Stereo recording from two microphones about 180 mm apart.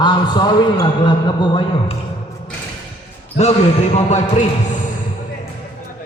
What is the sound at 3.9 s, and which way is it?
Speech, 40° left (ahead or behind).